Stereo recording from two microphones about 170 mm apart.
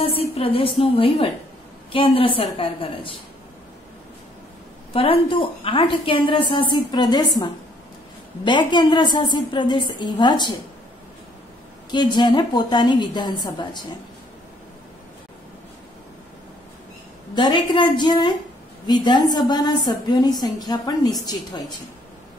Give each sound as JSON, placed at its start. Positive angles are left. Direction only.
{"t": 0.4, "sound": "a woman's voice", "side_deg": 35}
{"t": 4.9, "sound": "a woman's voice", "side_deg": 30}
{"t": 11.9, "sound": "a woman's voice", "side_deg": 25}
{"t": 17.4, "sound": "a woman's voice", "side_deg": 25}